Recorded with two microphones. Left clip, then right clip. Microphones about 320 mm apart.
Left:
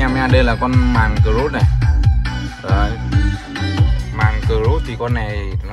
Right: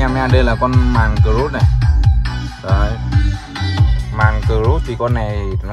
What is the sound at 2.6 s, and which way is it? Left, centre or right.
Speech, centre.